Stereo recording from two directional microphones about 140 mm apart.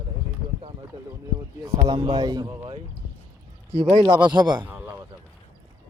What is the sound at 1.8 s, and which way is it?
Speech, 30° right (ahead or behind).